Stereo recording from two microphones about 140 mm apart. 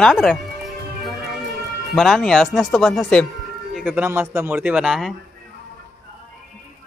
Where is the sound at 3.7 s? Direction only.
10° right (ahead or behind).